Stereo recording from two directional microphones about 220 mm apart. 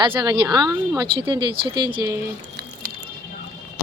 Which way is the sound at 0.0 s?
20° right (ahead or behind).